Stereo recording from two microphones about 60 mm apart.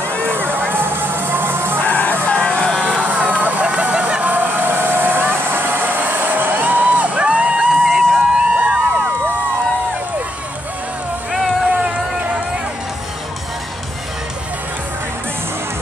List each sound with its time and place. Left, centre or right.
0.1 s music: left
0.4 s music: right
1.8 s music: left
3.0 s vehicle: right
7.8 s vehicle: centre
8.8 s a sound: right